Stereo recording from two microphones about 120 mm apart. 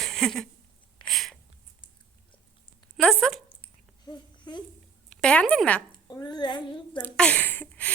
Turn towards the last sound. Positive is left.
turn(degrees=15)  # may be behind; listen again after turning